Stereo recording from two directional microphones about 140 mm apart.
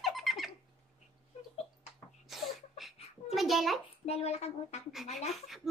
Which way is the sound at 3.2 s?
Centre (ahead or behind).